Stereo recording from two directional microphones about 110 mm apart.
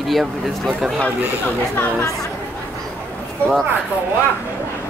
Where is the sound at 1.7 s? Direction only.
30° left (ahead or behind).